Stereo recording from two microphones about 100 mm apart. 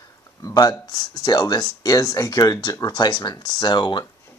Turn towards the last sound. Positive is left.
turn(degrees=50)  # may be behind; listen again after turning